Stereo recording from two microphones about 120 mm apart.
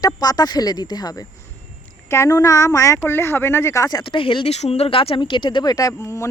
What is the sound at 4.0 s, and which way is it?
Speech, 45° left (ahead or behind).